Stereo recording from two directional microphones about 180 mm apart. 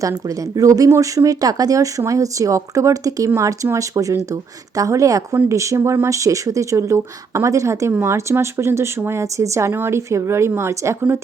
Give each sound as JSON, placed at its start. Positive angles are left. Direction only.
{"t": 0.3, "sound": "speech", "side_deg": -20}